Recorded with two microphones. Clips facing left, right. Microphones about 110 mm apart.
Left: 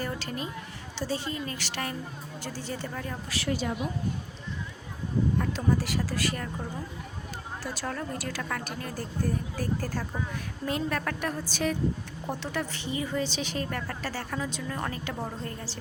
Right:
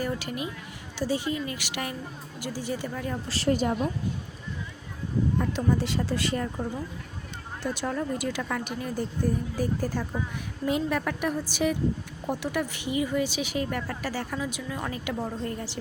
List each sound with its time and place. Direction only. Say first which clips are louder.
0.0 s a woman's voice: right 3 dB; 15° right (ahead or behind)
3.2 s a woman's voice: right 6 dB; 35° right (ahead or behind)
5.4 s speech: right 2 dB; 20° right (ahead or behind)
7.6 s a woman's voice: right 6 dB; 20° right (ahead or behind)